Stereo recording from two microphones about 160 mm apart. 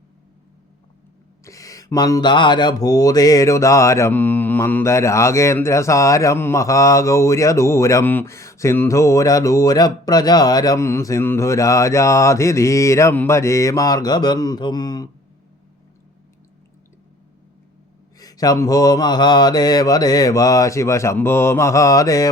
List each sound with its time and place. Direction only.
1.5 s speech: 20° left (ahead or behind)
18.2 s speech: 20° left (ahead or behind)